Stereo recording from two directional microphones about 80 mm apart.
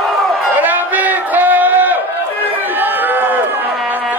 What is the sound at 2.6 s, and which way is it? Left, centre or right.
Run, right.